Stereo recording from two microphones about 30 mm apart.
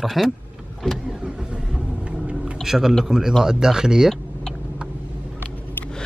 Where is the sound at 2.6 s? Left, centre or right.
Centre.